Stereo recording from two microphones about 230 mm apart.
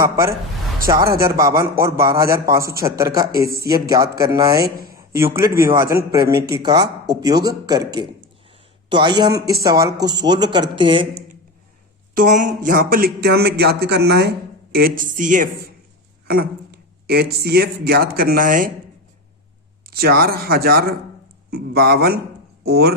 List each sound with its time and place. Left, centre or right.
0.9 s a man's voice: centre
4.6 s speech: right
4.9 s a man's voice: centre
12.1 s speech: right
19.9 s speech: right